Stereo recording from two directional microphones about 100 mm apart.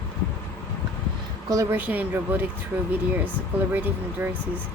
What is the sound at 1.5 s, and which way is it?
Speech, 30° right (ahead or behind).